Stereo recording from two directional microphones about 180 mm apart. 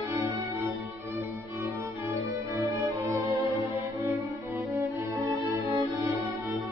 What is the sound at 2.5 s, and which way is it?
Music, 15° right (ahead or behind).